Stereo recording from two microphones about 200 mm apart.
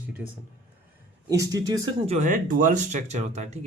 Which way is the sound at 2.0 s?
35° right (ahead or behind).